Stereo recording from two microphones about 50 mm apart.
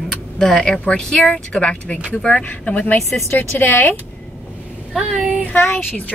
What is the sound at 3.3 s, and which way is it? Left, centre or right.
Speech, left.